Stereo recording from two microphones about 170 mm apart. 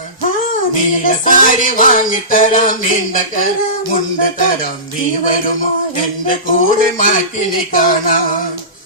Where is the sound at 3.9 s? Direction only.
50° left (ahead or behind).